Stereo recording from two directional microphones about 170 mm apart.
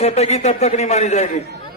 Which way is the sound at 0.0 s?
40° left (ahead or behind).